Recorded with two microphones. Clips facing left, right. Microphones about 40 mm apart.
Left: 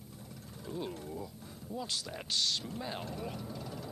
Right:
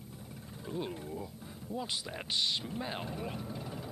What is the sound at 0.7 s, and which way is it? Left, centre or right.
Speech, centre.